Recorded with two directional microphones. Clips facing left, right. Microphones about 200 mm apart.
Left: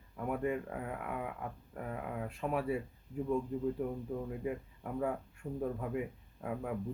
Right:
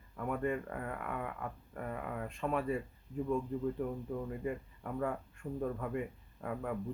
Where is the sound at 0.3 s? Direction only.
5° left (ahead or behind).